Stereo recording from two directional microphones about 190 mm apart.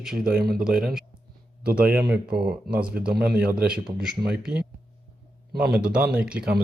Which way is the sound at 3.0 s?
55° right (ahead or behind).